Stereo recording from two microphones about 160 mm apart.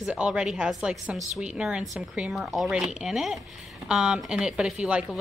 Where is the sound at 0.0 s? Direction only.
5° right (ahead or behind).